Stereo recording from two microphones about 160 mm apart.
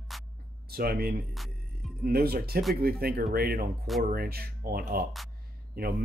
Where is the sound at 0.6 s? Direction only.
70° right (ahead or behind).